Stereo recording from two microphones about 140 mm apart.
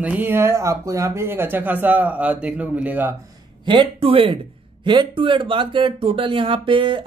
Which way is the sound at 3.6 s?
40° right (ahead or behind).